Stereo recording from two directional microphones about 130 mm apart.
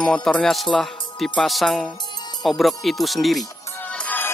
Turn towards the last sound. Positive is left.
turn(degrees=0)  # may be behind; listen again after turning